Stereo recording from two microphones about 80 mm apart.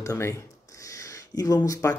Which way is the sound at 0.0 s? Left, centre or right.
Left.